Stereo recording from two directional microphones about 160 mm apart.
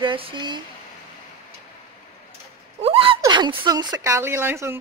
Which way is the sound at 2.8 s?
35° right (ahead or behind).